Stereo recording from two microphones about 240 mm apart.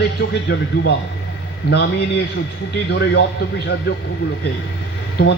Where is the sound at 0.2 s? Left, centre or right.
Left.